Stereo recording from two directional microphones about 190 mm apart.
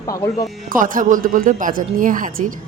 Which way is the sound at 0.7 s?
45° right (ahead or behind).